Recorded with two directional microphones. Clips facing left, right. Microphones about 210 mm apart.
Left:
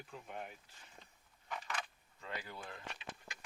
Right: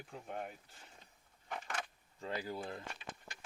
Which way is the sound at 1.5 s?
45° right (ahead or behind).